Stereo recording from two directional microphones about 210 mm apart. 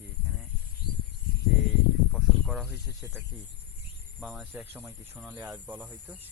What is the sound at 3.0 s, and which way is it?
Speech, 10° right (ahead or behind).